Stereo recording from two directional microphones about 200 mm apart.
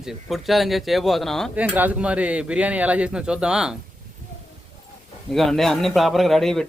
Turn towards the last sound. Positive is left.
turn(degrees=0)  # may be behind; listen again after turning